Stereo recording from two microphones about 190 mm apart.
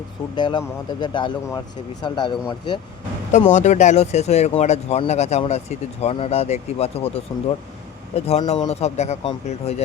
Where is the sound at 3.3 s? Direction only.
40° left (ahead or behind).